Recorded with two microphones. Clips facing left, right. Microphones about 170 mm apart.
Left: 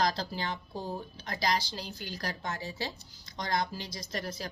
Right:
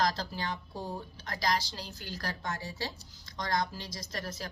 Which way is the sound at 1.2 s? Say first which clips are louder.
Left 1 dB; 20° left (ahead or behind).